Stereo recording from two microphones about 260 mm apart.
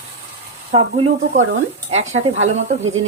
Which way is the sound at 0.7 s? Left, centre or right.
Right.